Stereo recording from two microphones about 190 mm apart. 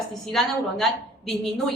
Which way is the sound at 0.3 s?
Centre (ahead or behind).